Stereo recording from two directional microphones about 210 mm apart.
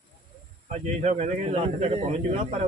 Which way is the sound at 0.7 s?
35° right (ahead or behind).